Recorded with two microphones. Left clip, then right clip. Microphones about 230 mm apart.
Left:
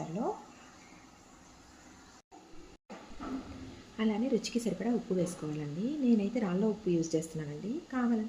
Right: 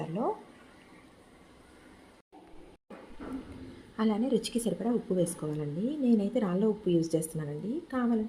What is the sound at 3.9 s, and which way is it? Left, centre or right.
A woman's voice, right.